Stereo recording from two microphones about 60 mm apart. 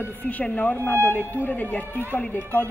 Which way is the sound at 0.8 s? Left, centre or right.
Left.